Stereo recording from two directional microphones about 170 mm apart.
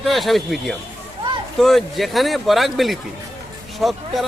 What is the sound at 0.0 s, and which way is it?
Speech, centre (ahead or behind).